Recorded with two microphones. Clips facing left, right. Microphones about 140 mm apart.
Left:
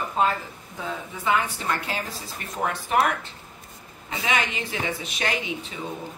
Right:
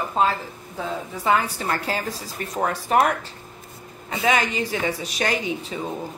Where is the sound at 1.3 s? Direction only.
40° right (ahead or behind).